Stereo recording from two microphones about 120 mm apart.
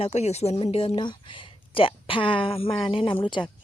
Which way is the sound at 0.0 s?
65° left (ahead or behind).